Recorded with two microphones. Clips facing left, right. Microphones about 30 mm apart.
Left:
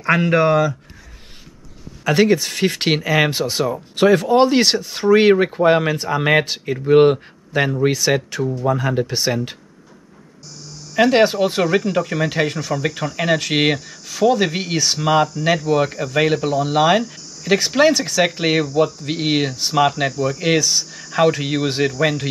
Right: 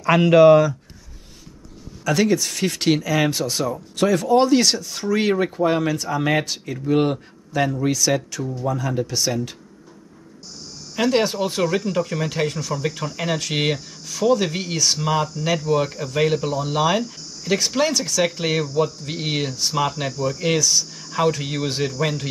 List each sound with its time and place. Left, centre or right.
0.0 s speech: left
2.0 s speech: left
11.0 s speech: left